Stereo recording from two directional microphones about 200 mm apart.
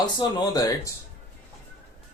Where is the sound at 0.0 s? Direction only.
20° left (ahead or behind).